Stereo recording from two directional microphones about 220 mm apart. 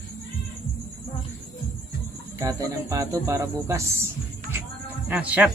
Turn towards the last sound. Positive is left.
turn(degrees=-5)  # may be behind; listen again after turning